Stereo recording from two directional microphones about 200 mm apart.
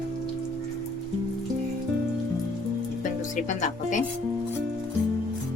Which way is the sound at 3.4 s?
40° left (ahead or behind).